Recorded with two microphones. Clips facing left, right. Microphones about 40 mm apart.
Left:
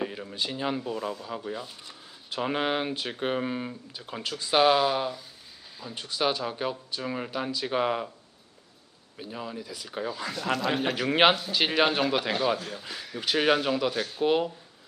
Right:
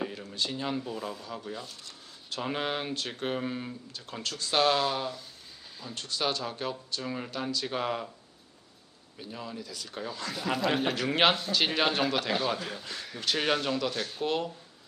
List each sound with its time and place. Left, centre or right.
0.0 s speech: centre
9.1 s speech: centre
10.5 s a man's voice: centre
10.9 s speech: centre